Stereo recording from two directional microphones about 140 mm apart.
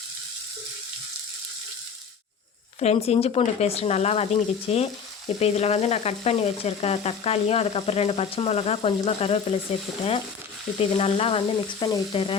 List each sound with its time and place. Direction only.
2.8 s frying: 50° left (ahead or behind)
10.8 s frying: 45° left (ahead or behind)